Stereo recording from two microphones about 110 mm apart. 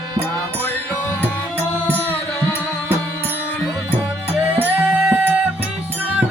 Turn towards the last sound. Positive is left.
turn(degrees=-5)  # may be behind; listen again after turning